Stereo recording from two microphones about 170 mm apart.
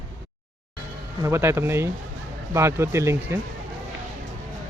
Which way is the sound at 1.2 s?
15° right (ahead or behind).